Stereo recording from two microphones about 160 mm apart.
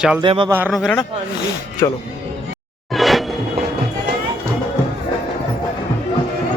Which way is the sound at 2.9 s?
Centre (ahead or behind).